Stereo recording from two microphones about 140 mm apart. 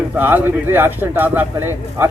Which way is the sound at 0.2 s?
15° right (ahead or behind).